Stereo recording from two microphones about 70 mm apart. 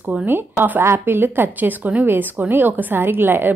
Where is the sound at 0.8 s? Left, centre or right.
Right.